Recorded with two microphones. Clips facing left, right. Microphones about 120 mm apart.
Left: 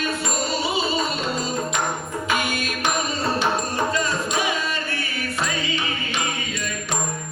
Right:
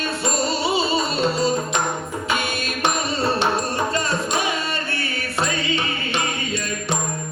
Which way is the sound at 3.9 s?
30° right (ahead or behind).